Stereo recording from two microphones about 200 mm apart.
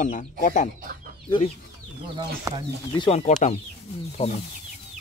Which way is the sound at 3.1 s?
35° left (ahead or behind).